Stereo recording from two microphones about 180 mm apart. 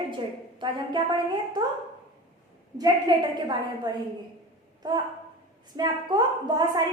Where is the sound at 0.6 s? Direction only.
25° right (ahead or behind).